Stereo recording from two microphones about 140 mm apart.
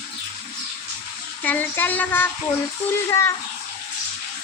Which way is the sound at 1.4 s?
10° left (ahead or behind).